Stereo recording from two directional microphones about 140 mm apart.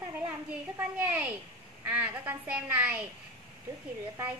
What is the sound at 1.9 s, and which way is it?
A woman's voice, 10° right (ahead or behind).